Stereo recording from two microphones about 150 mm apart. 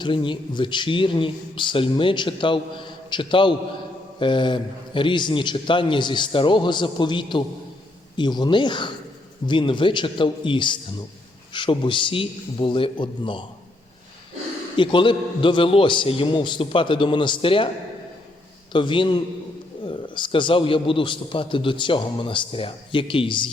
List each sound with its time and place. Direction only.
0.0 s a man's voice: 35° left (ahead or behind)
14.8 s a man's voice: 35° left (ahead or behind)
18.7 s a man's voice: 35° left (ahead or behind)